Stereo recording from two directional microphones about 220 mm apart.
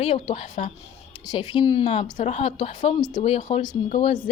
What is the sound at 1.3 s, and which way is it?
A woman's voice, 20° left (ahead or behind).